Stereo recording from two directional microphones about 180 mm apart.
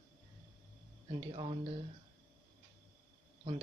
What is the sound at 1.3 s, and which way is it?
Speech, 30° right (ahead or behind).